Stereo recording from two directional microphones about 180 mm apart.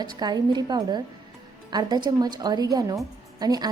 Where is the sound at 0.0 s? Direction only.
20° right (ahead or behind).